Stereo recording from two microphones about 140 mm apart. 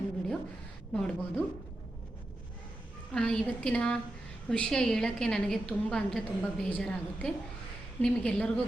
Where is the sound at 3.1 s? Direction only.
5° left (ahead or behind).